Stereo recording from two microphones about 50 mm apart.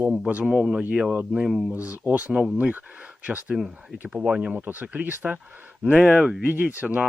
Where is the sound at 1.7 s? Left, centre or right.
Right.